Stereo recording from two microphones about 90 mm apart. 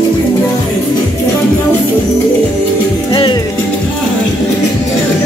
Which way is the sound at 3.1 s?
70° left (ahead or behind).